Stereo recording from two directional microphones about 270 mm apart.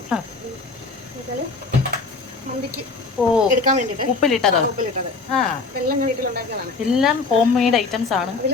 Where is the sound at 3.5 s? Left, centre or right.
Right.